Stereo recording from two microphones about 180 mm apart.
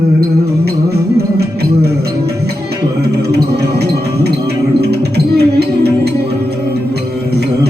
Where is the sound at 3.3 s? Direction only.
65° right (ahead or behind).